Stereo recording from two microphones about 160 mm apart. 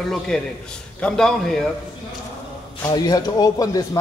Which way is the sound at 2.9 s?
25° left (ahead or behind).